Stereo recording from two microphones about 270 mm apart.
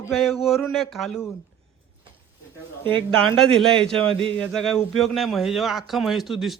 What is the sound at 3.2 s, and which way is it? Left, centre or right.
A man's voice, centre.